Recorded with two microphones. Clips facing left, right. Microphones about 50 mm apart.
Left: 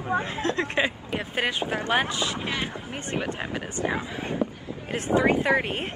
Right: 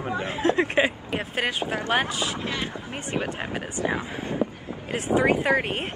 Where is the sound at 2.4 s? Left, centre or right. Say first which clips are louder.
Even; centre.